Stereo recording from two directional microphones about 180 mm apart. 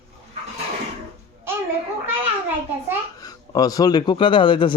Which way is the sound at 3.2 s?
20° left (ahead or behind).